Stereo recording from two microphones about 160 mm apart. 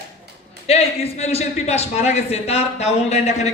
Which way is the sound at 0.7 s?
40° left (ahead or behind).